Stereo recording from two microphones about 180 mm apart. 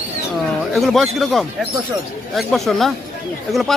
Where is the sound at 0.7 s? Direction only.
Centre (ahead or behind).